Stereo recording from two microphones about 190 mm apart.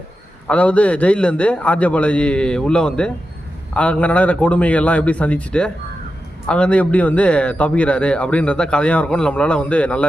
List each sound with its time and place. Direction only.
0.4 s a man's voice: 5° left (ahead or behind)